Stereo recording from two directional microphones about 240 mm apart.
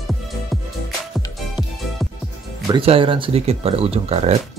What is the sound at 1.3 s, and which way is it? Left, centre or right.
Music, centre.